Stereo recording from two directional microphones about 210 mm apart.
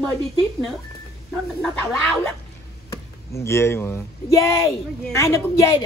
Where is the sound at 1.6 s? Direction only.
5° left (ahead or behind).